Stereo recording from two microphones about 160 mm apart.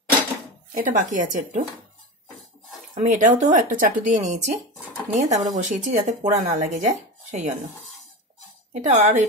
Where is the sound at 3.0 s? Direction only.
50° right (ahead or behind).